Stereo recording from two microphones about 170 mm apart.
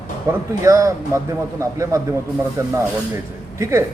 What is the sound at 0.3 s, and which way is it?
A man's voice, 20° right (ahead or behind).